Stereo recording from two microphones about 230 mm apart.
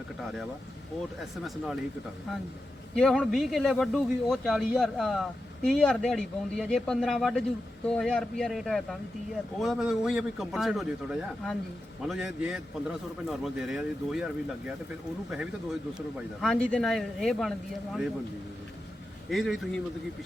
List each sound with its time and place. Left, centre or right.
0.2 s speech: centre
1.5 s speech: centre
2.9 s speech: centre
16.1 s speech: centre
19.3 s speech: centre